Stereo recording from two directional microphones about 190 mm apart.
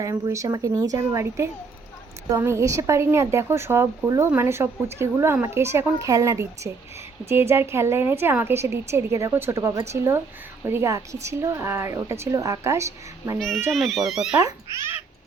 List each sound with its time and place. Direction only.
0.0 s speech: 15° right (ahead or behind)
13.7 s speech: centre (ahead or behind)
14.4 s speech: 15° right (ahead or behind)